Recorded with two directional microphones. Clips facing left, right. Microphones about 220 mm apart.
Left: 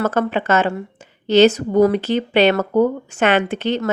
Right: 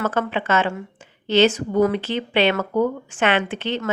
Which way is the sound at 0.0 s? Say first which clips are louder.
Left 4 dB; 40° left (ahead or behind).